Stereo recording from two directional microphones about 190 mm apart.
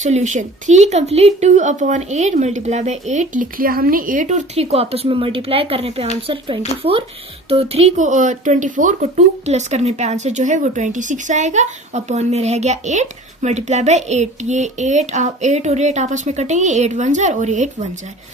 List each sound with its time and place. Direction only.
0.0 s speech: 40° right (ahead or behind)